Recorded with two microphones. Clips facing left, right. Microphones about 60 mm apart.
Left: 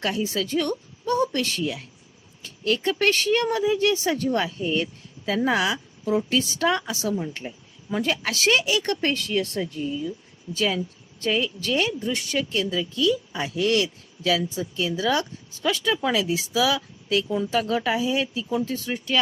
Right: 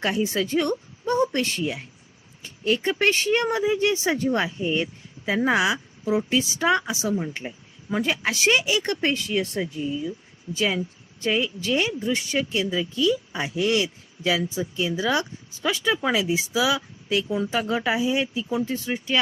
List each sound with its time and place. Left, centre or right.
0.0 s speech: right